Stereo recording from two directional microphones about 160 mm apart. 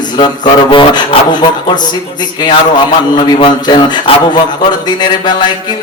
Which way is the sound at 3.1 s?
30° left (ahead or behind).